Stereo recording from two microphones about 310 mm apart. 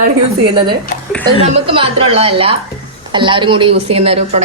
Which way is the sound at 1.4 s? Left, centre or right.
Centre.